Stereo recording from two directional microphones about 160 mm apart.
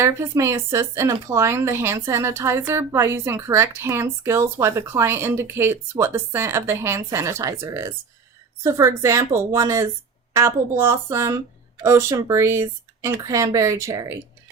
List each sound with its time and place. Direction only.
0.0 s speech: 15° right (ahead or behind)